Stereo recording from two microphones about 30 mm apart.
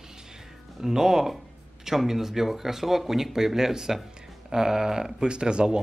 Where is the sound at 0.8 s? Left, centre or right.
Centre.